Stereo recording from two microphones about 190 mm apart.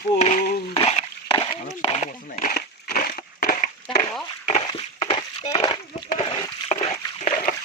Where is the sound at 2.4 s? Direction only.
50° left (ahead or behind).